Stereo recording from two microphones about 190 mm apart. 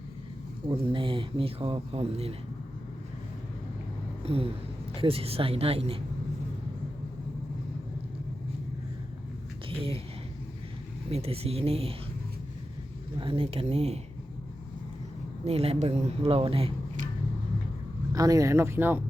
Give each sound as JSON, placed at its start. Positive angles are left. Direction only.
{"t": 0.9, "sound": "speech", "side_deg": -25}
{"t": 4.2, "sound": "a sound", "side_deg": -30}
{"t": 4.9, "sound": "speech", "side_deg": -30}
{"t": 9.6, "sound": "speech", "side_deg": -30}
{"t": 11.1, "sound": "speech", "side_deg": -30}
{"t": 13.1, "sound": "speech", "side_deg": -30}
{"t": 15.4, "sound": "speech", "side_deg": -30}
{"t": 18.1, "sound": "speech", "side_deg": -20}